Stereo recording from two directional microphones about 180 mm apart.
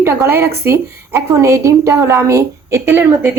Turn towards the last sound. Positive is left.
turn(degrees=-10)  # may be behind; listen again after turning